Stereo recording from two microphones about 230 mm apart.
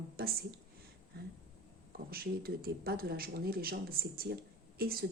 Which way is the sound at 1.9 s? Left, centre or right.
Right.